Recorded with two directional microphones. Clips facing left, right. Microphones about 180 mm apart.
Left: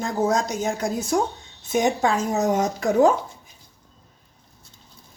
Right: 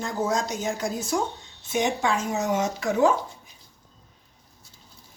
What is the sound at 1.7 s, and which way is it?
A woman's voice, 40° left (ahead or behind).